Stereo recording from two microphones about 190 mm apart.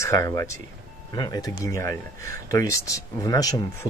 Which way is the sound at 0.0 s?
15° left (ahead or behind).